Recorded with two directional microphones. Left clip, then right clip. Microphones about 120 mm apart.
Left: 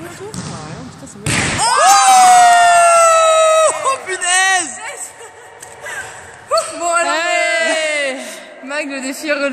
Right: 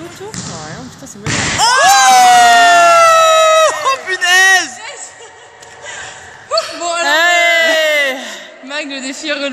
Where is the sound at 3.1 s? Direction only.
15° left (ahead or behind).